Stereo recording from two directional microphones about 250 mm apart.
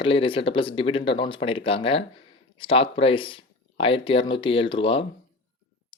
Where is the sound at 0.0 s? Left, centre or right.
Left.